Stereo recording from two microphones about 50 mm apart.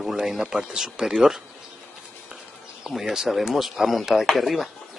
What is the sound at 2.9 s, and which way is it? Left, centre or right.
Speech, centre.